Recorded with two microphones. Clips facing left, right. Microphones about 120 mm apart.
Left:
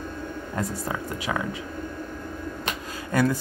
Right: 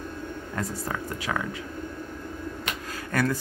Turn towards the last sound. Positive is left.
turn(degrees=20)  # may be behind; listen again after turning